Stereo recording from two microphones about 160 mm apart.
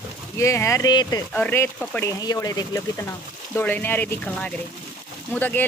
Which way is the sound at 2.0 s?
20° left (ahead or behind).